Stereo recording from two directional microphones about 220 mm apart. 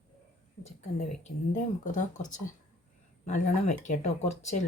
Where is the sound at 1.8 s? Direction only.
35° left (ahead or behind).